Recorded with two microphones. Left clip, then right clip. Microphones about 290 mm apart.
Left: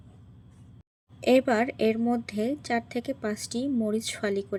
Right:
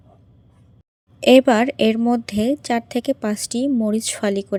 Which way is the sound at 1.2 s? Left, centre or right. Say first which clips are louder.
Right 9 dB; right.